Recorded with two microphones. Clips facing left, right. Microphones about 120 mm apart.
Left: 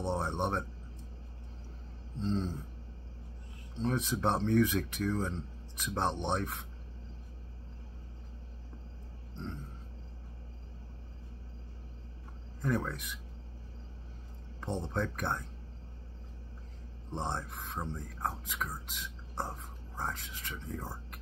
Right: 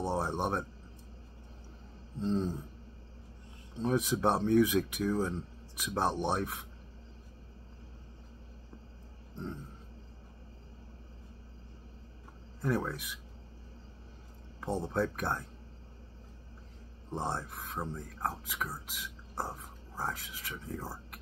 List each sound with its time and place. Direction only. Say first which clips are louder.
0.0 s speech: right 1 dB; 10° right (ahead or behind)
2.2 s speech: right 2 dB; 10° right (ahead or behind)
3.8 s speech: right 3 dB; 10° right (ahead or behind)
12.6 s speech: right 1 dB; 5° right (ahead or behind)
14.6 s speech: right 3 dB; 5° right (ahead or behind)
17.1 s speech: right 1 dB; 5° right (ahead or behind)